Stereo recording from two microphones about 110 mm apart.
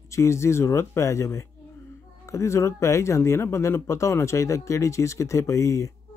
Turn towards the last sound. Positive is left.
turn(degrees=30)  # may be behind; listen again after turning